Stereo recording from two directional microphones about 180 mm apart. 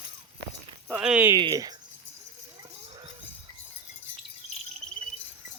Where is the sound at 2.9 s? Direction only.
30° right (ahead or behind).